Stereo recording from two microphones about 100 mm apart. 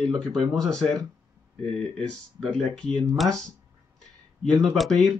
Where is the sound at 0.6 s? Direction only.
5° left (ahead or behind).